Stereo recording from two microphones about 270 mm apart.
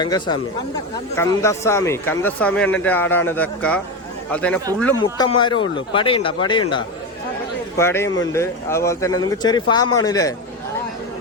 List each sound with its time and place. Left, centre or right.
0.0 s speech: centre